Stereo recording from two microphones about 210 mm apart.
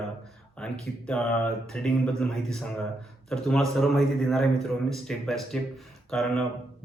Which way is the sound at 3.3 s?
Centre (ahead or behind).